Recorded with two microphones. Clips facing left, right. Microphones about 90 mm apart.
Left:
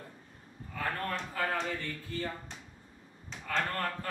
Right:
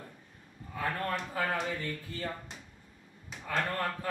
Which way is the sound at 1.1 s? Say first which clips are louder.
Right 1 dB; 15° right (ahead or behind).